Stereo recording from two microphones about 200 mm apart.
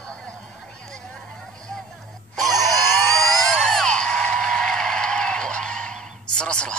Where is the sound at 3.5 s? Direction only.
5° left (ahead or behind).